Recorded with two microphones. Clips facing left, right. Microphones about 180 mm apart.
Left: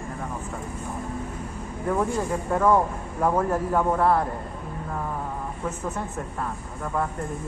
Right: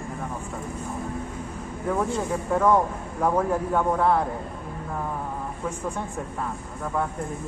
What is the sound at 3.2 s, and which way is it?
Speech, centre (ahead or behind).